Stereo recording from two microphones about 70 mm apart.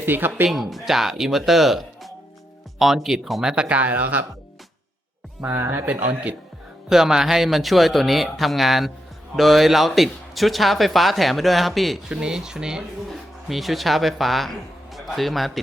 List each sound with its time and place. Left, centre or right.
0.0 s speech: right
0.4 s speech: centre
3.5 s speech: centre
5.4 s speech: right
5.9 s speech: right
6.8 s speech: centre
12.0 s a man's voice: centre